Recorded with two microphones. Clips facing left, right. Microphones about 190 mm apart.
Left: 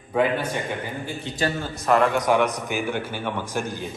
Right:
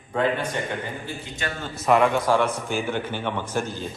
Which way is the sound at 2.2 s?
15° left (ahead or behind).